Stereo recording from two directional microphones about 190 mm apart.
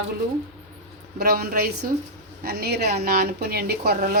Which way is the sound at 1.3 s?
55° right (ahead or behind).